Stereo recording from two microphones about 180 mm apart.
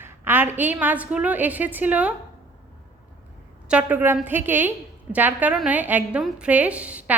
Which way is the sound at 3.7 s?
10° right (ahead or behind).